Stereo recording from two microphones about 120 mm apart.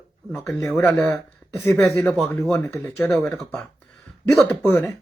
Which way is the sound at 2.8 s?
10° left (ahead or behind).